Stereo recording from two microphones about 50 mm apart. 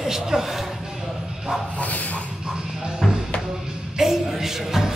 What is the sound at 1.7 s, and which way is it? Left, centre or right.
Dog, left.